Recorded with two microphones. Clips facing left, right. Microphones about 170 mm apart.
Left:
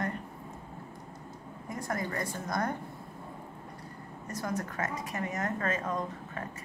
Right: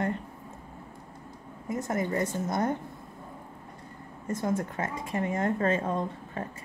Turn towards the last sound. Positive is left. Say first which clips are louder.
# right 3 dB
turn(degrees=-30)  # may be behind; listen again after turning